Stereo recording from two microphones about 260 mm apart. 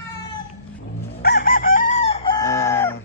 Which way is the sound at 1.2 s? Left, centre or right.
Left.